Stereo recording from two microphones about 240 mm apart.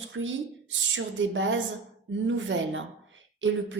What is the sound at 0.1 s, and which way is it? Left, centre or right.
Speech, right.